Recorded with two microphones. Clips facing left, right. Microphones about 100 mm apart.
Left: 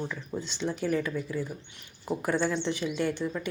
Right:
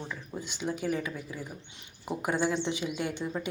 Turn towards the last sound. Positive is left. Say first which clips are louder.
# left 3 dB
turn(degrees=-15)  # may be behind; listen again after turning